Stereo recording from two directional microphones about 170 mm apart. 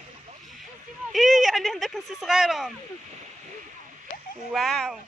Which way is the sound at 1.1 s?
Centre (ahead or behind).